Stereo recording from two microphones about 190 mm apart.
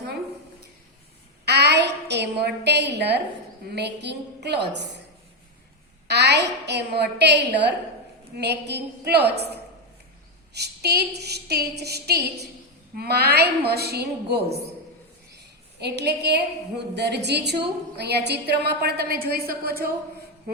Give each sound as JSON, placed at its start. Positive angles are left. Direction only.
{"t": 1.5, "sound": "a sound", "side_deg": -60}
{"t": 3.8, "sound": "a woman's voice", "side_deg": -60}
{"t": 6.1, "sound": "a woman's voice", "side_deg": -60}
{"t": 15.8, "sound": "a woman's voice", "side_deg": -60}